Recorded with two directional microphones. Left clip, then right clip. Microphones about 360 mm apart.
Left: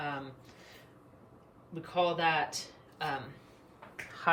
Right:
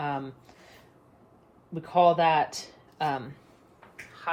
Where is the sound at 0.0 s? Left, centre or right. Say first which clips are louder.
Right 6 dB; centre.